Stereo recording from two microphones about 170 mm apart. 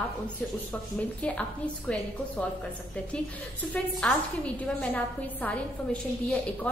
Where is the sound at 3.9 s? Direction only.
5° left (ahead or behind).